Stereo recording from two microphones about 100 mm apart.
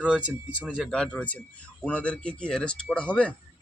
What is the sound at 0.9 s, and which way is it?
Speech, 10° left (ahead or behind).